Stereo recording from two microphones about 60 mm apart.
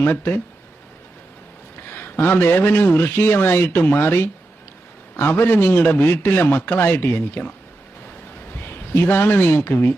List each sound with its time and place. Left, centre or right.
0.0 s a man's voice: left
2.0 s a man's voice: left
8.9 s a man's voice: left